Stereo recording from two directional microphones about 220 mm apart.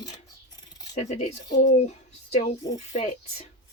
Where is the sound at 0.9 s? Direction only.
30° left (ahead or behind).